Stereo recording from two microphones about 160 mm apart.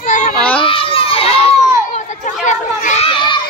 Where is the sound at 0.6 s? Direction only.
35° left (ahead or behind).